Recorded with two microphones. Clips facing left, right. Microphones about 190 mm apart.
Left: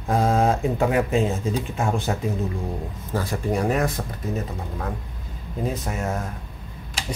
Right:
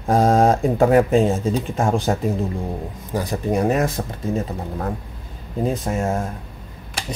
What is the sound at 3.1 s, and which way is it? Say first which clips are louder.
Speech: right 3 dB; 20° right (ahead or behind).